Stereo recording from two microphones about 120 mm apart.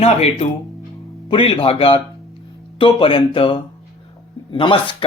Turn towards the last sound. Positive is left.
turn(degrees=45)  # may be behind; listen again after turning